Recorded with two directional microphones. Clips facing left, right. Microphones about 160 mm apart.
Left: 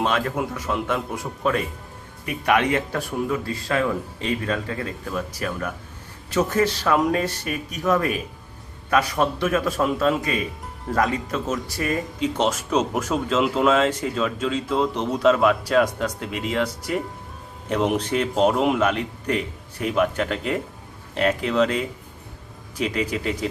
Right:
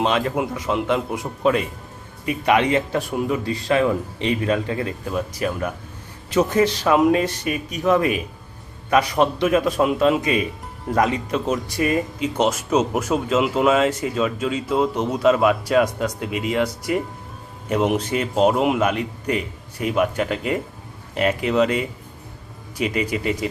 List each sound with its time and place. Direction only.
0.0 s speech: 15° right (ahead or behind)
2.5 s speech: 15° right (ahead or behind)